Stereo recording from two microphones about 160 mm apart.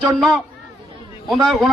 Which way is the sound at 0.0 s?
Centre (ahead or behind).